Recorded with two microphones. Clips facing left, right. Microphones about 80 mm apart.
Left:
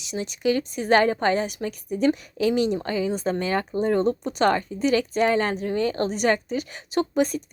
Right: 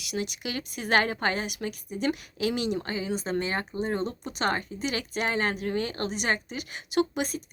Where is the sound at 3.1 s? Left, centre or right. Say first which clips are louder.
Left 4 dB; left.